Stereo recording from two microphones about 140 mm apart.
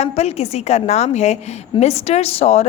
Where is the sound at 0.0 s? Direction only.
50° left (ahead or behind).